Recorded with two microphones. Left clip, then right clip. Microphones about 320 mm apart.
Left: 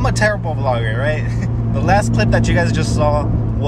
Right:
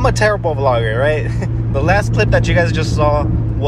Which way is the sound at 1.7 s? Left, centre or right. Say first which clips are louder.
Right 1 dB; centre.